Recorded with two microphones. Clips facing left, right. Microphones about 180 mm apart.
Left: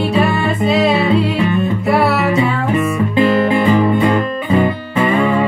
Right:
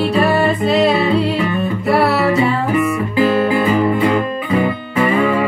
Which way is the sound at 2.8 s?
25° left (ahead or behind).